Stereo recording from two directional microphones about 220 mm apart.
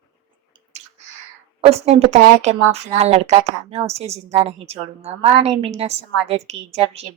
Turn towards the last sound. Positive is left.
turn(degrees=-30)  # may be behind; listen again after turning